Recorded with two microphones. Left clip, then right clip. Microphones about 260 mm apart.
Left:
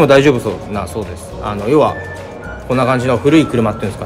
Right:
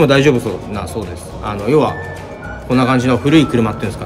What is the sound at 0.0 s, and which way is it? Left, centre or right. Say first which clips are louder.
A man's voice: left 2 dB; centre.